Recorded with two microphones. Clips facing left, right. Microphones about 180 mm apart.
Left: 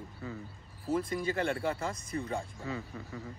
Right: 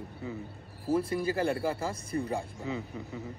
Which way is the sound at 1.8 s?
30° right (ahead or behind).